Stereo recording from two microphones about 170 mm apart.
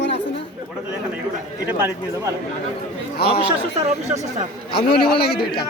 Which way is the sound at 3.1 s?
70° left (ahead or behind).